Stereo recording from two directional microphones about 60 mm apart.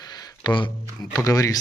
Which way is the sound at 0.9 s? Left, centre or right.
Left.